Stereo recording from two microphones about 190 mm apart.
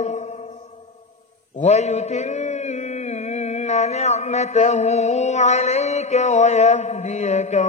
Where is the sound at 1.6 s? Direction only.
35° left (ahead or behind).